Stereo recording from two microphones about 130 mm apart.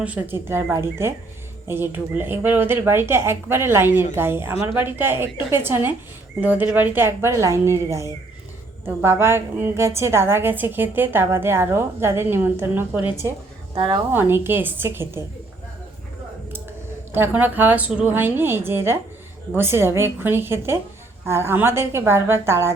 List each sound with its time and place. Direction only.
0.0 s a woman's voice: 10° right (ahead or behind)
13.7 s a woman's voice: 40° right (ahead or behind)
14.1 s a woman's voice: 15° right (ahead or behind)
17.1 s a woman's voice: 15° right (ahead or behind)